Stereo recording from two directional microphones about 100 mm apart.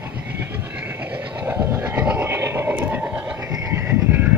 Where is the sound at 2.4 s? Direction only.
25° right (ahead or behind).